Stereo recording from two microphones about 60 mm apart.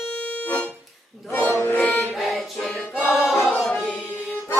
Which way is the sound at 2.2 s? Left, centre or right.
Centre.